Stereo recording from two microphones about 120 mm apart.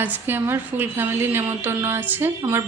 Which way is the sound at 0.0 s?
15° right (ahead or behind).